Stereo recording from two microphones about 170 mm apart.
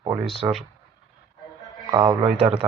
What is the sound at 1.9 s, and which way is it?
Speech, 20° right (ahead or behind).